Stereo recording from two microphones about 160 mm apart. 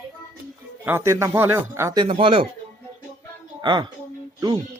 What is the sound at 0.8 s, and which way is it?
Speech, 15° right (ahead or behind).